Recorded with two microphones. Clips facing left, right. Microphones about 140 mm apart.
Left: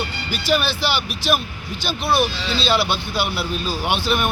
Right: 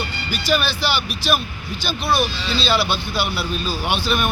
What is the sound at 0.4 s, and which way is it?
Speech, 25° left (ahead or behind).